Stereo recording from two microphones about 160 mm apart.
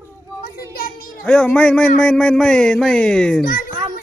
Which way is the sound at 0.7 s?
65° left (ahead or behind).